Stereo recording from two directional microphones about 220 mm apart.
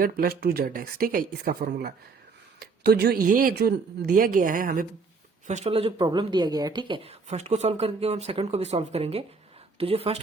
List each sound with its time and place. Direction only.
0.0 s speech: 45° right (ahead or behind)
5.5 s speech: 30° right (ahead or behind)